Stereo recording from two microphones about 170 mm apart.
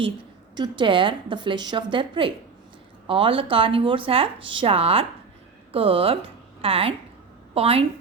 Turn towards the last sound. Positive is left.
turn(degrees=-35)  # may be behind; listen again after turning